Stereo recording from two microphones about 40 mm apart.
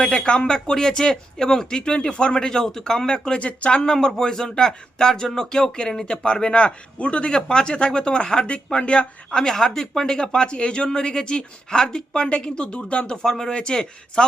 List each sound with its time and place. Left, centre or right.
0.0 s speech: left
2.5 s speech: centre
3.4 s speech: left
3.9 s speech: centre
9.3 s speech: centre
13.2 s speech: centre